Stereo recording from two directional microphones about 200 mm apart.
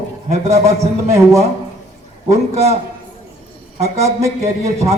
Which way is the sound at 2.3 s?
30° right (ahead or behind).